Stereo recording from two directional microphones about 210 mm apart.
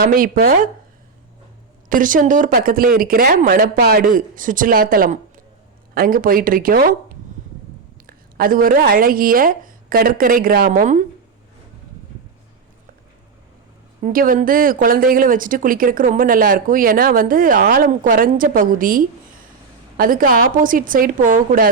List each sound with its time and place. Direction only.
0.0 s speech: 45° right (ahead or behind)
1.9 s speech: 40° right (ahead or behind)
8.0 s speech: 45° right (ahead or behind)
14.0 s speech: 40° right (ahead or behind)